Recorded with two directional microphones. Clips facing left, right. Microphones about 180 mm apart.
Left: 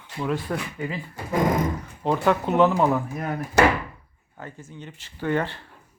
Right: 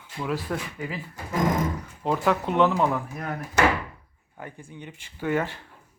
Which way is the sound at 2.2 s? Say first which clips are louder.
Left 2 dB; centre (ahead or behind).